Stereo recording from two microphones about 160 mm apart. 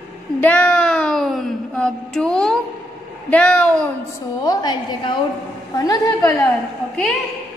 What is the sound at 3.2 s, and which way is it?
Speech, 10° left (ahead or behind).